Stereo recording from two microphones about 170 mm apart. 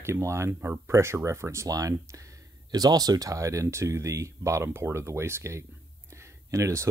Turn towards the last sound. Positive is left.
turn(degrees=-15)  # may be behind; listen again after turning